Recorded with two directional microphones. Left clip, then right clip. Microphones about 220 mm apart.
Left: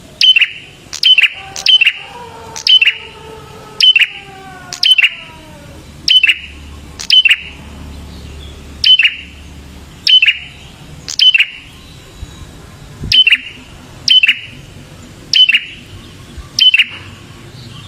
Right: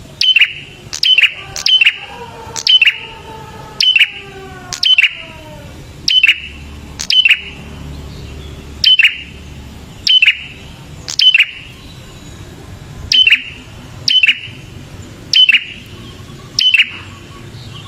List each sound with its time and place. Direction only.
0.2 s bird: 10° right (ahead or behind)
3.8 s a sound: 10° right (ahead or behind)
4.7 s bird: 10° right (ahead or behind)
6.1 s alarm: 10° right (ahead or behind)
6.9 s bird: 10° right (ahead or behind)
8.8 s alarm: 20° right (ahead or behind)
11.0 s bird: 10° right (ahead or behind)
13.1 s alarm: centre (ahead or behind)
15.3 s bird: 15° right (ahead or behind)
16.6 s alarm: centre (ahead or behind)